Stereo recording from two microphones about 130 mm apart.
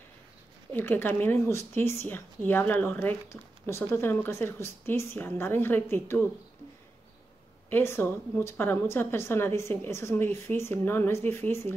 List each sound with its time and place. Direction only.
0.7 s speech: 15° left (ahead or behind)
7.7 s a woman's voice: 20° left (ahead or behind)